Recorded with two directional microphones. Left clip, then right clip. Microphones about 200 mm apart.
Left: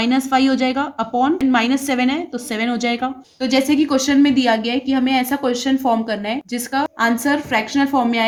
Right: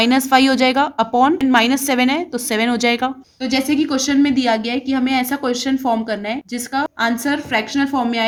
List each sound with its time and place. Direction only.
0.0 s a woman's voice: 35° right (ahead or behind)
3.4 s a woman's voice: centre (ahead or behind)